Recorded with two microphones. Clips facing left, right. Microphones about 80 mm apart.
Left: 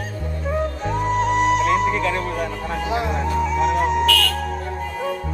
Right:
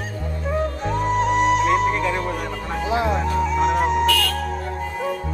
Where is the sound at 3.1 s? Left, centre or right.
Centre.